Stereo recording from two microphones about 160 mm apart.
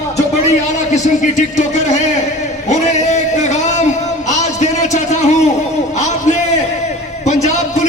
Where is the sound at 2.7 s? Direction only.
45° left (ahead or behind).